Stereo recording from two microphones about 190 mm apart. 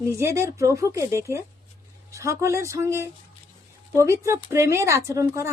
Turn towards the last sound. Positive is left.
turn(degrees=-15)  # may be behind; listen again after turning